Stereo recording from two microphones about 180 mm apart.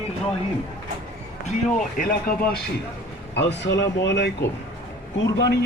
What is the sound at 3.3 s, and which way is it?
Speech, 75° left (ahead or behind).